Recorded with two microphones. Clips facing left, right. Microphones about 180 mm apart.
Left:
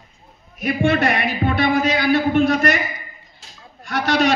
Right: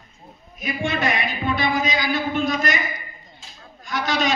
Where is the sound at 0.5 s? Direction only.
65° left (ahead or behind).